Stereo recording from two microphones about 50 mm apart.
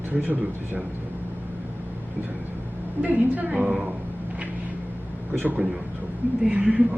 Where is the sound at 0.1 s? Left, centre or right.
Right.